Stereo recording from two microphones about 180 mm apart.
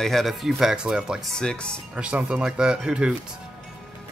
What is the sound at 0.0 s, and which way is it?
Speech, centre (ahead or behind).